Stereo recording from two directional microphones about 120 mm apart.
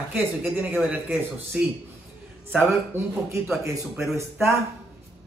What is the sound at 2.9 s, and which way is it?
A man's voice, 20° right (ahead or behind).